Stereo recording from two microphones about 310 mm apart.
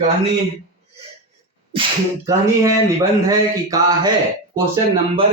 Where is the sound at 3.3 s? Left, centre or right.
Centre.